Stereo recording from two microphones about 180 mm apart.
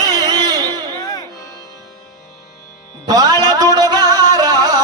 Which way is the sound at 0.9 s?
20° left (ahead or behind).